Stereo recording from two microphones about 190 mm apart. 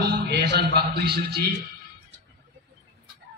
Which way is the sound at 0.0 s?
60° right (ahead or behind).